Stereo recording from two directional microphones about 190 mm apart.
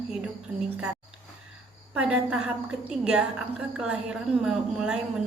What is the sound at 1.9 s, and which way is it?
A woman's voice, 5° right (ahead or behind).